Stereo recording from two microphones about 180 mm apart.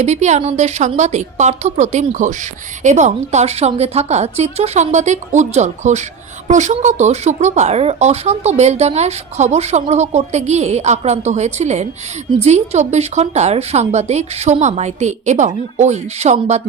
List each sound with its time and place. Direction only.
0.0 s a woman's voice: 40° right (ahead or behind)